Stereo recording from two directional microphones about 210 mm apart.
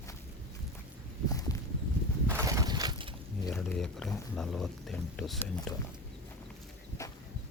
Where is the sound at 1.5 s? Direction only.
15° left (ahead or behind).